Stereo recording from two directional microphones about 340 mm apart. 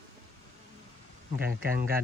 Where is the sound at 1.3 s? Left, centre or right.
Right.